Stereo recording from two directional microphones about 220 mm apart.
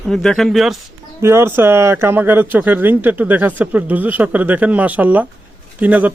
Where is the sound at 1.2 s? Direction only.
10° right (ahead or behind).